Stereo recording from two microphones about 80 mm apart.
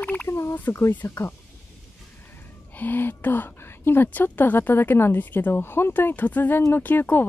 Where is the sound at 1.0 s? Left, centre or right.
Left.